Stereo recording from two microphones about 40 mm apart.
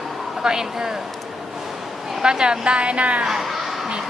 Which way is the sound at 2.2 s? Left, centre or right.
Centre.